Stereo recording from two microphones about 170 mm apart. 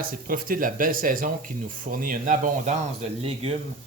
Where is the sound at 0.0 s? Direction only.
55° right (ahead or behind); by 3.5 s 40° right (ahead or behind).